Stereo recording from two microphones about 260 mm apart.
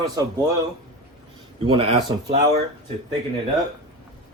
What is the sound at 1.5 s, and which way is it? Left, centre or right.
Speech, centre.